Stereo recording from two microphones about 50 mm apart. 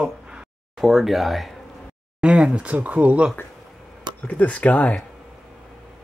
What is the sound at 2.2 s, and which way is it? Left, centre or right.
Speech, centre.